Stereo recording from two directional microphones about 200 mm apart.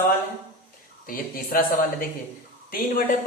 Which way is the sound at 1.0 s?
45° left (ahead or behind).